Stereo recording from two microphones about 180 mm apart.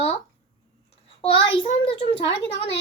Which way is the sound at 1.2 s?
30° left (ahead or behind).